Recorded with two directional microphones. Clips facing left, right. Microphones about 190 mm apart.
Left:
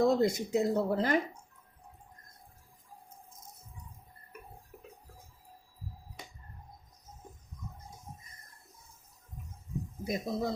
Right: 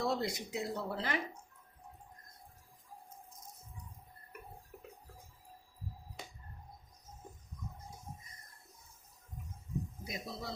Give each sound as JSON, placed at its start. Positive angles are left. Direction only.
{"t": 0.0, "sound": "speech", "side_deg": 45}
{"t": 10.0, "sound": "speech", "side_deg": 50}